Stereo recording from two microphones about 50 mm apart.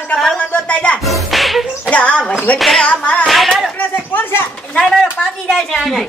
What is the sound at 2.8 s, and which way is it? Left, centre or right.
Speech, left.